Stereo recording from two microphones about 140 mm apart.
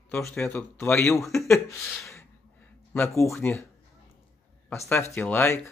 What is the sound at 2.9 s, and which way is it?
Speech, 15° left (ahead or behind).